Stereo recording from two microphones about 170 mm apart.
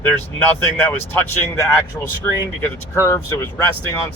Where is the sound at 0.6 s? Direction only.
10° left (ahead or behind).